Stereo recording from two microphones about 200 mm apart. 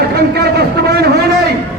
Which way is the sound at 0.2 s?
55° right (ahead or behind).